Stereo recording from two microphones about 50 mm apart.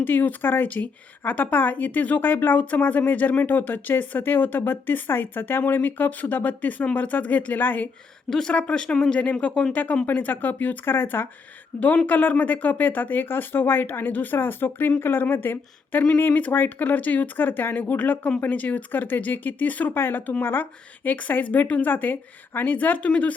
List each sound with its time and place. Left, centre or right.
0.0 s a woman's voice: left
8.3 s speech: centre
8.5 s speech: left
10.1 s a woman's voice: left
10.8 s speech: left
12.0 s a woman's voice: left
19.9 s a woman's voice: left
23.0 s speech: left